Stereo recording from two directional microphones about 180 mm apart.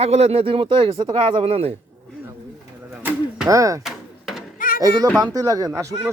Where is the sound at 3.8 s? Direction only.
Centre (ahead or behind).